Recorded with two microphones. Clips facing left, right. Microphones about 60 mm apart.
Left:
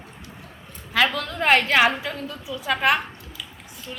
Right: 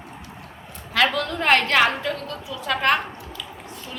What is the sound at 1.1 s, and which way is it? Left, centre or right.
Speech, centre.